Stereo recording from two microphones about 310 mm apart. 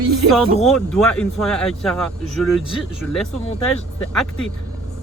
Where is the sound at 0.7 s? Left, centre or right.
Centre.